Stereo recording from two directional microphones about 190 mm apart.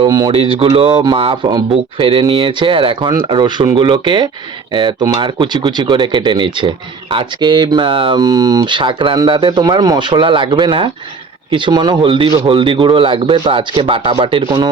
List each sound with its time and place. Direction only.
0.0 s speech: 20° right (ahead or behind)